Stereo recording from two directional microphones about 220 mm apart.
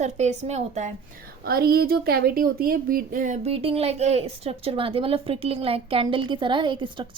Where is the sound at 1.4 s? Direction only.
45° right (ahead or behind).